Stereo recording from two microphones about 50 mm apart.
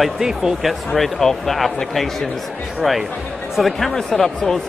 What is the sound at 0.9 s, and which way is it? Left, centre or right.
A man's voice, centre.